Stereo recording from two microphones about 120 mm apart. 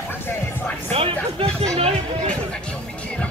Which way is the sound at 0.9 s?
55° right (ahead or behind).